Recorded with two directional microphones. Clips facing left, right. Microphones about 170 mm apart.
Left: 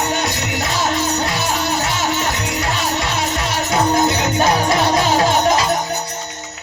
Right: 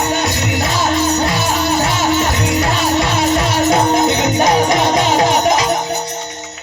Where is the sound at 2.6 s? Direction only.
15° right (ahead or behind).